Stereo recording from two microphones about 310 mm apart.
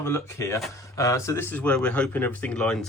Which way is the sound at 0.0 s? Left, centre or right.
Centre.